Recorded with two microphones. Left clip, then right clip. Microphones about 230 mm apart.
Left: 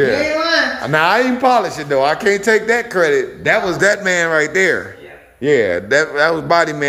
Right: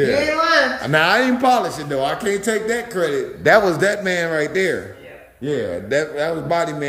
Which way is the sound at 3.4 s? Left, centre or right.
Centre.